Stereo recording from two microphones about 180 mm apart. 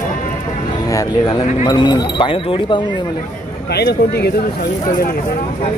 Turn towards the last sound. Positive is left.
turn(degrees=65)  # may be behind; listen again after turning